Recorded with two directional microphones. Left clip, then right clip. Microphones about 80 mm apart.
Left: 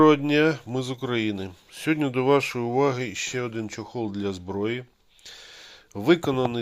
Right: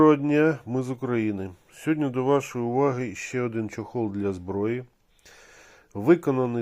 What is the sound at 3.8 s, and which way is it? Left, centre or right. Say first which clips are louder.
Speech: right 3 dB; right.